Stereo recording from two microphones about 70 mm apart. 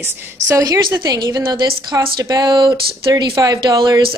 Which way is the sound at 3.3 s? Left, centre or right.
Right.